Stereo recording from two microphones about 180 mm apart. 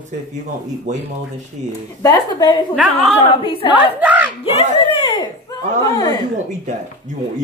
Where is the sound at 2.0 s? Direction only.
25° left (ahead or behind).